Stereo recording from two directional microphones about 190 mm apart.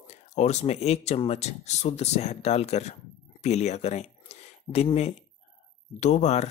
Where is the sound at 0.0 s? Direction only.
35° left (ahead or behind).